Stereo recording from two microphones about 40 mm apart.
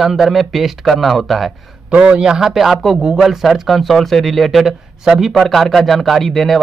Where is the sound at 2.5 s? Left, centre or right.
Centre.